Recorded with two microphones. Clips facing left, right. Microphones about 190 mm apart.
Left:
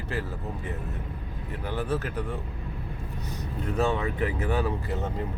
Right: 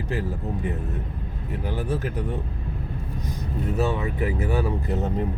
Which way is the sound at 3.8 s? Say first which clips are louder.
Even; 5° right (ahead or behind).